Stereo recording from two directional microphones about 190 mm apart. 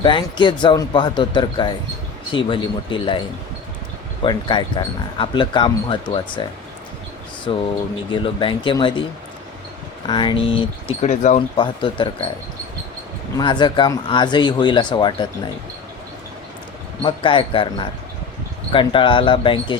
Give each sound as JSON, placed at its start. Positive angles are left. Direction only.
{"t": 0.0, "sound": "speech", "side_deg": 25}
{"t": 7.5, "sound": "speech", "side_deg": 25}
{"t": 10.1, "sound": "speech", "side_deg": 25}
{"t": 11.3, "sound": "speech", "side_deg": 25}
{"t": 13.3, "sound": "speech", "side_deg": 25}
{"t": 17.0, "sound": "speech", "side_deg": 25}